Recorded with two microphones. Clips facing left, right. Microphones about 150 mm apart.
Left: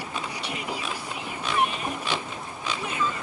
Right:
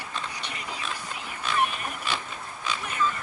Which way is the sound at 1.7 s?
20° left (ahead or behind).